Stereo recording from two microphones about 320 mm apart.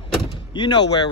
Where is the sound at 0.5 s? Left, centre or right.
Centre.